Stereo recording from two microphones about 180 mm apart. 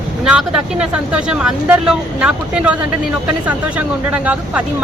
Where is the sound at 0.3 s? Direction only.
5° right (ahead or behind).